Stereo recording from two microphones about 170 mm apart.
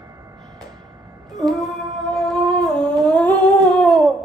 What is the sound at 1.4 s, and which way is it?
Humming, centre (ahead or behind).